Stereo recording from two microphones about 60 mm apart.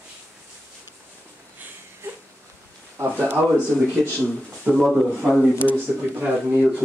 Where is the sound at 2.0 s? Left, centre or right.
Right.